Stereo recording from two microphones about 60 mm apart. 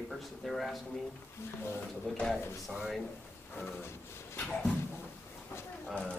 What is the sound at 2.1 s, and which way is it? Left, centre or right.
Speech, centre.